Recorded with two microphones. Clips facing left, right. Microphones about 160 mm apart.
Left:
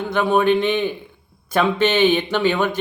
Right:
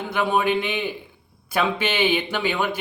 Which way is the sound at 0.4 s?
10° right (ahead or behind).